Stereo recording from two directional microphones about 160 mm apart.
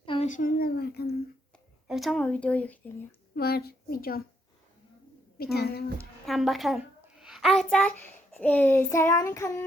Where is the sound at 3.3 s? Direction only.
80° left.